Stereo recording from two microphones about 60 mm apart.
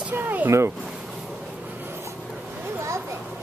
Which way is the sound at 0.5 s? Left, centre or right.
Right.